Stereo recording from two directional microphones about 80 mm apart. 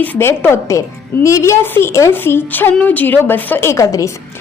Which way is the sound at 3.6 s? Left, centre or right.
Left.